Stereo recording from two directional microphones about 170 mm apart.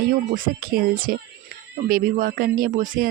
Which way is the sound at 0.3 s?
60° right (ahead or behind).